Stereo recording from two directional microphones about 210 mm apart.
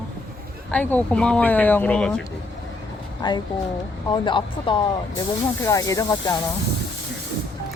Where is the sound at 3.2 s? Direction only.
20° left (ahead or behind).